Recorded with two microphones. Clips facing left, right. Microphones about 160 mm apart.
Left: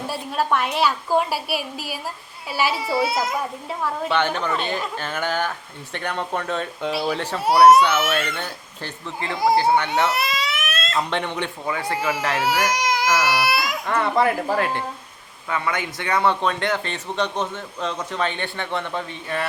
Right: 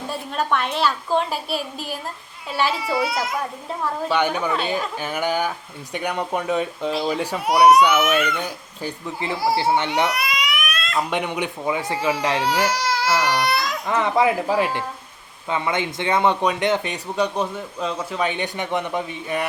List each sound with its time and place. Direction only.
0.1 s a woman's voice: 5° left (ahead or behind)
2.9 s a child's voice: 30° left (ahead or behind)
4.1 s speech: 10° right (ahead or behind)
10.1 s baby cry: 25° left (ahead or behind)
10.9 s speech: 10° right (ahead or behind)
12.4 s speech: 10° left (ahead or behind)
13.9 s speech: 10° right (ahead or behind)